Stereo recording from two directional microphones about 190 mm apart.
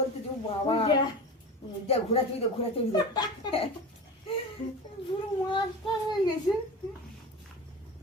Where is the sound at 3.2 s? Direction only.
25° left (ahead or behind).